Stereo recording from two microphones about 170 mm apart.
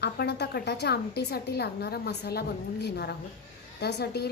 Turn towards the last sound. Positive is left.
turn(degrees=70)  # may be behind; listen again after turning